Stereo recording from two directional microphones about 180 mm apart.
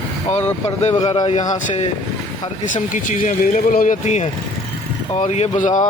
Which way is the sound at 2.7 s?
45° left (ahead or behind).